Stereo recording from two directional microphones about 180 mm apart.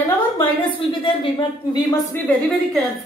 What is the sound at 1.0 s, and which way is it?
Speech, 30° left (ahead or behind).